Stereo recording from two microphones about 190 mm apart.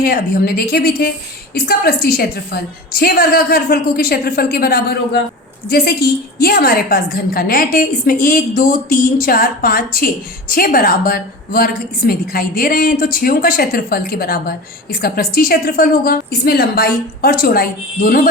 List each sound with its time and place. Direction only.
0.0 s a woman's voice: 50° left (ahead or behind)